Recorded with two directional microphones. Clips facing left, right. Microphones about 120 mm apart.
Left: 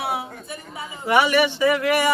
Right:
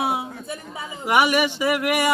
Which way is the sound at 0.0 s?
20° right (ahead or behind).